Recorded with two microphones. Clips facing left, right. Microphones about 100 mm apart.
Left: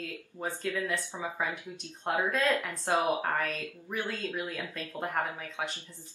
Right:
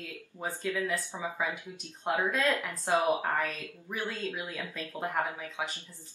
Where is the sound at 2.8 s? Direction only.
15° left (ahead or behind).